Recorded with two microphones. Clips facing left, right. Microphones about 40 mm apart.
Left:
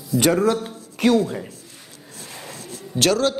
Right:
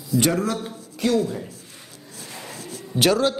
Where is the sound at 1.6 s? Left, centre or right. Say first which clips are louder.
Even; right.